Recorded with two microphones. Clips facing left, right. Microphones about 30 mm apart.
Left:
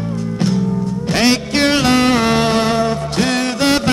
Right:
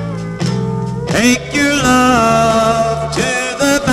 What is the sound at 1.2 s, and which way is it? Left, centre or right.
Music, left.